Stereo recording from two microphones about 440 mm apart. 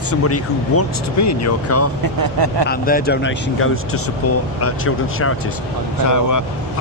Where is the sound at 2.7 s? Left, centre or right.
Centre.